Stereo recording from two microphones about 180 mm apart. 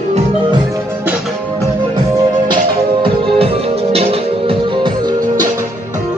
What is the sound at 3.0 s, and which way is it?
Music, 30° right (ahead or behind).